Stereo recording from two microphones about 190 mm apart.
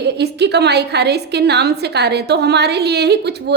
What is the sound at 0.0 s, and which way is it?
A woman's voice, 60° right (ahead or behind).